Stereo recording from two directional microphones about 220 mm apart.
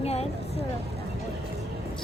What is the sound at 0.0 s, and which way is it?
Vehicle, 30° left (ahead or behind).